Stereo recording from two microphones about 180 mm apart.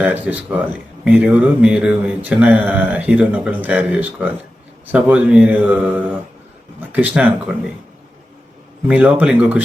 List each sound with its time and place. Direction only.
0.0 s speech: 10° right (ahead or behind)
8.9 s speech: 10° right (ahead or behind)